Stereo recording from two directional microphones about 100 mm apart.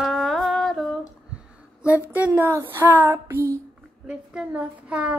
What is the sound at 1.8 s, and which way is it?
Speech, 15° right (ahead or behind).